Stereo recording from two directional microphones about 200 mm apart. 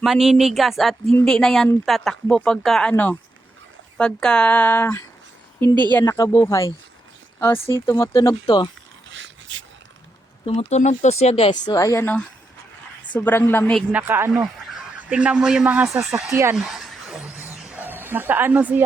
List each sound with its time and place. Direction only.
0.0 s speech: centre (ahead or behind); by 8.7 s 20° left (ahead or behind)
9.1 s a sound: 70° right (ahead or behind)
10.4 s speech: 30° left (ahead or behind); by 13.8 s 10° left (ahead or behind)
13.9 s speech: 10° right (ahead or behind)
16.3 s speech: 15° right (ahead or behind)
16.6 s a sound: centre (ahead or behind)